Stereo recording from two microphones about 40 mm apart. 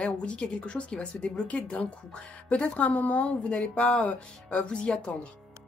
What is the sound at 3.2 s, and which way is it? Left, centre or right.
Speech, centre.